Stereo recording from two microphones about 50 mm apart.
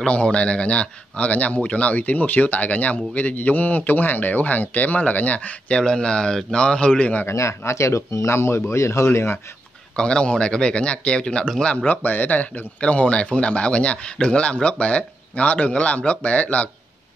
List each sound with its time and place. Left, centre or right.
0.0 s a man's voice: left
7.2 s speech: left
9.9 s speech: centre
11.6 s a man's voice: left
12.8 s speech: left